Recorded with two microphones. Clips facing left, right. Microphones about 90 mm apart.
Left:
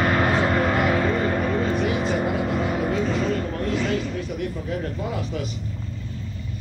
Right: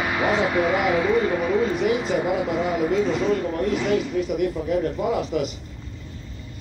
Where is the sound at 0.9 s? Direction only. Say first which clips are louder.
Right 2 dB; 5° right (ahead or behind).